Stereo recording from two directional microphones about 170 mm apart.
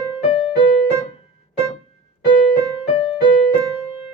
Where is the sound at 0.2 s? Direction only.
35° left (ahead or behind).